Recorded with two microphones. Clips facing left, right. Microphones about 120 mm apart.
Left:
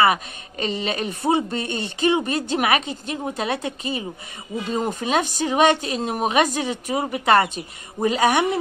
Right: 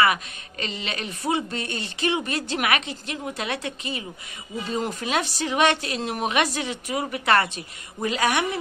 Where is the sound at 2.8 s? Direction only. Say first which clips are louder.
Left 4 dB; 30° left (ahead or behind).